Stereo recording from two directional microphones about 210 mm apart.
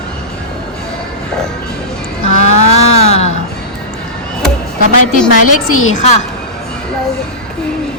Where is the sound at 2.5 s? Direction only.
30° left (ahead or behind).